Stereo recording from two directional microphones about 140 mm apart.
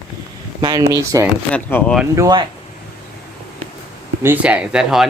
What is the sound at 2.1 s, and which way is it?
Speech, 25° right (ahead or behind).